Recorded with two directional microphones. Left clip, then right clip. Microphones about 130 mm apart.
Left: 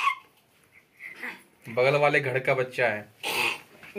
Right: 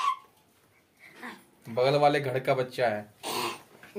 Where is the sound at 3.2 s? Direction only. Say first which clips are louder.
Left 5 dB; 45° right (ahead or behind).